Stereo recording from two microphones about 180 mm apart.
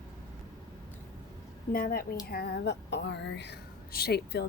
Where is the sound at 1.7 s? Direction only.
55° left (ahead or behind).